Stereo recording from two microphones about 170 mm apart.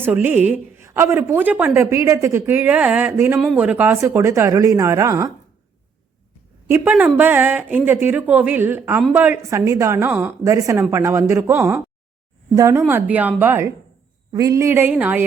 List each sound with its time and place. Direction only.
0.0 s speech: 10° right (ahead or behind)
6.7 s speech: 10° right (ahead or behind)